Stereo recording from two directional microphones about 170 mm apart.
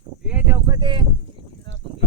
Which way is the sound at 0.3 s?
10° right (ahead or behind).